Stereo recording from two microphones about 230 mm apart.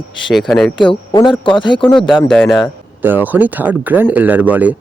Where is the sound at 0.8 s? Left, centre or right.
Left.